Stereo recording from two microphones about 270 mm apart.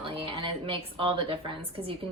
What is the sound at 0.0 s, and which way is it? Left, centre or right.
A woman's voice, centre.